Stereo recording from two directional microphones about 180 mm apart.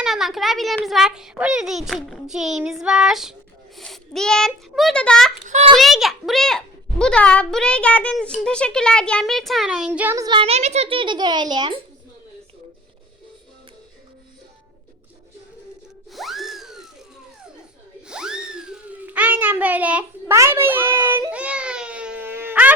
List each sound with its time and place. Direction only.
0.0 s a child's voice: centre (ahead or behind)
5.5 s a child's voice: 40° right (ahead or behind)
5.7 s a woman's voice: centre (ahead or behind)
10.2 s a child's voice: 30° right (ahead or behind)
16.1 s a sound: centre (ahead or behind)
18.1 s a child's voice: 5° right (ahead or behind)
21.2 s baby cry: 5° right (ahead or behind)